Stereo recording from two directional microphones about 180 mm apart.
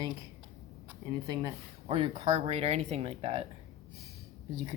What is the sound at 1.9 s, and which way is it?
Speech, 30° right (ahead or behind).